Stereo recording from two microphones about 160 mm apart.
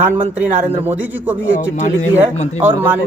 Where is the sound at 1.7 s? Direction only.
50° left (ahead or behind).